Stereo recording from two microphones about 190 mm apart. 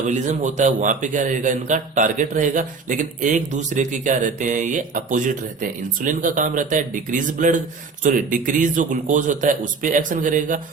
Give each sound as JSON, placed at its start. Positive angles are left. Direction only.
{"t": 0.0, "sound": "a man's voice", "side_deg": -40}